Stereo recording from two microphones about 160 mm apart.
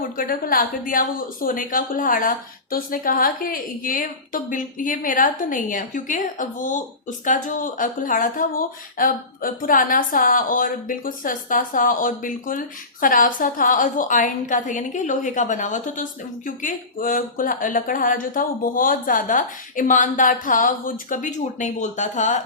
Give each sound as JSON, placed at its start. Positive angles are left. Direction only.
{"t": 0.2, "sound": "speech", "side_deg": 65}